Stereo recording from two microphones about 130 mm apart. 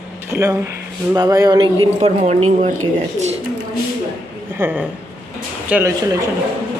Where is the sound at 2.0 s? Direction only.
60° right (ahead or behind).